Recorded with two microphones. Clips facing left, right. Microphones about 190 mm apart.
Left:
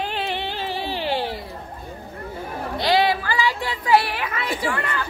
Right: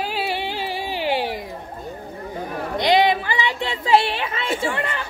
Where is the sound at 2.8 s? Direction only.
20° right (ahead or behind).